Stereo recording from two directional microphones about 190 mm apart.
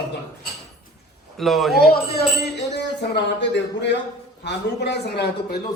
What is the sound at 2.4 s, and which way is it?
Speech, 60° left (ahead or behind).